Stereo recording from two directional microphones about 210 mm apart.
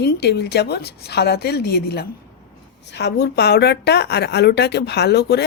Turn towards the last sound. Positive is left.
turn(degrees=50)  # may be behind; listen again after turning